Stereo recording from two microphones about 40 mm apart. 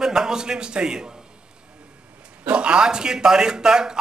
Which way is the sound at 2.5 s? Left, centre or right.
Right.